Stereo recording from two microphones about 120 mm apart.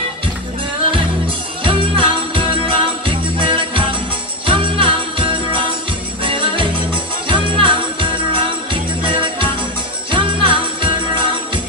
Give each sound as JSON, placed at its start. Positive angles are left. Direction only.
{"t": 1.6, "sound": "music", "side_deg": -45}